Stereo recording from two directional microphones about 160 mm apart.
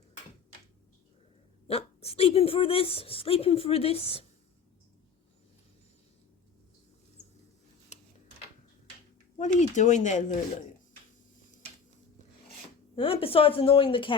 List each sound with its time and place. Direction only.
1.6 s speech: 40° left (ahead or behind)
7.2 s a sound: 40° left (ahead or behind)
9.4 s speech: 50° left (ahead or behind)
13.0 s speech: 35° left (ahead or behind)